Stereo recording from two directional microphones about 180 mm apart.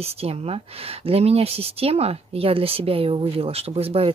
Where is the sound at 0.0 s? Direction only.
35° right (ahead or behind).